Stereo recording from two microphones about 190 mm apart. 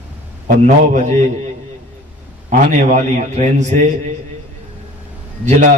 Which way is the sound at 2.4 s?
40° right (ahead or behind).